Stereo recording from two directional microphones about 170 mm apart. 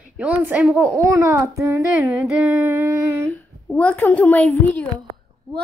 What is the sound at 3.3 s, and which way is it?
A woman's voice, 10° left (ahead or behind).